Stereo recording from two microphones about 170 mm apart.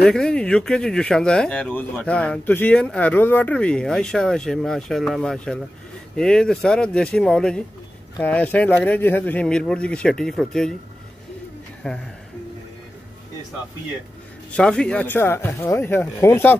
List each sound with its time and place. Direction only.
0.0 s speech: 5° left (ahead or behind)
11.8 s speech: 5° left (ahead or behind)
14.5 s speech: 5° left (ahead or behind)